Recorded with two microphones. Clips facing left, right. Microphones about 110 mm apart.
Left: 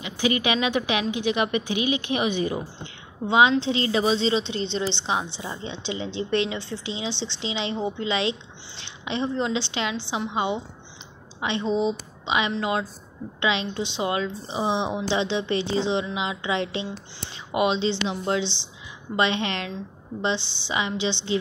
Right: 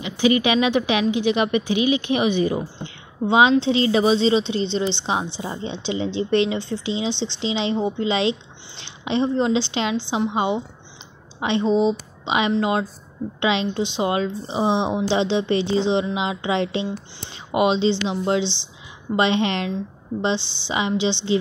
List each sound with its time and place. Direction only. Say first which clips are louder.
0.0 s a woman's voice: right 6 dB; 30° right (ahead or behind)
5.4 s a woman's voice: right 5 dB; 30° right (ahead or behind)